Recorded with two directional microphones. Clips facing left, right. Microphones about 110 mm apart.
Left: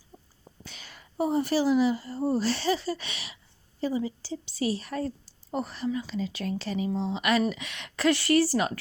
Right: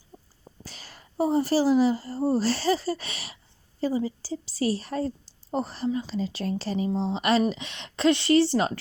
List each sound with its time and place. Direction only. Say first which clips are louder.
0.6 s a woman's voice: right 1 dB; 35° right (ahead or behind)